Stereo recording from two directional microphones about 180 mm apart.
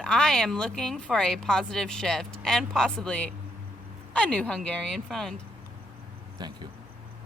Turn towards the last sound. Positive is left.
turn(degrees=-25)  # may be behind; listen again after turning